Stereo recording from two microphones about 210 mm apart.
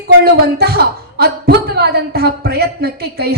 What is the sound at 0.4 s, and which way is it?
A woman's voice, 50° right (ahead or behind).